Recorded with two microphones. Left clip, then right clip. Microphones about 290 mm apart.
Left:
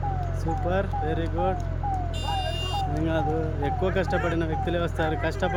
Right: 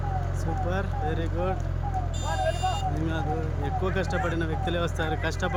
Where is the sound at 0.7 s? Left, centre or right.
Centre.